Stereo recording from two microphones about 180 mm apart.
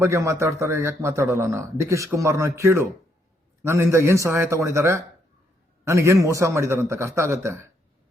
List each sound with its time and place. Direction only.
0.0 s a man's voice: 15° right (ahead or behind)